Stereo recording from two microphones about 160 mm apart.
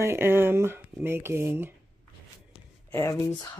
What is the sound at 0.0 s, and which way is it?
Speech, 15° right (ahead or behind).